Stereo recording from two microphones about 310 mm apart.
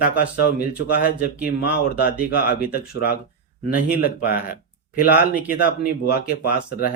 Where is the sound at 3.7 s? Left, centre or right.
Left.